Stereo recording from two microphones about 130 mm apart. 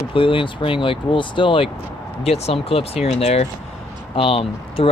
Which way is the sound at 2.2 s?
55° left (ahead or behind).